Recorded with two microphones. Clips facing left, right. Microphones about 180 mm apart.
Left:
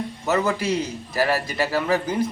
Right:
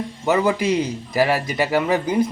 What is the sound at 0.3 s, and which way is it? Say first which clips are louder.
A man's voice: right 4 dB; 15° right (ahead or behind).